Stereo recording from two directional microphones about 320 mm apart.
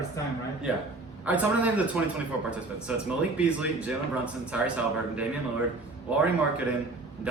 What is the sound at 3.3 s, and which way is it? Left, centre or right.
Speech, centre.